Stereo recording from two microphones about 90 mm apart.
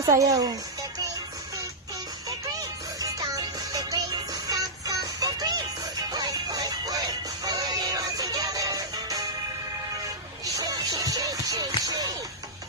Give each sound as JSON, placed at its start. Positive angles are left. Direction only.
{"t": 0.0, "sound": "speech", "side_deg": -40}
{"t": 2.6, "sound": "music", "side_deg": -40}
{"t": 10.4, "sound": "music", "side_deg": -40}